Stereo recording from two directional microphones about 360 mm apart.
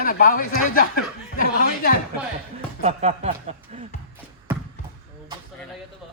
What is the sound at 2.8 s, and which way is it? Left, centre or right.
Speech, centre.